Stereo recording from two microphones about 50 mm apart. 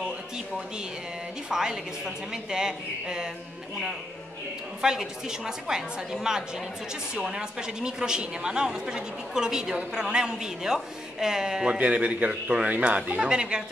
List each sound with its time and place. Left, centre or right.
1.5 s a woman's voice: centre
4.8 s a woman's voice: centre
11.8 s speech: right
12.6 s speech: right
13.2 s a woman's voice: centre